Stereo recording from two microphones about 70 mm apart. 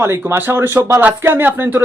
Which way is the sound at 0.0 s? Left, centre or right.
Right.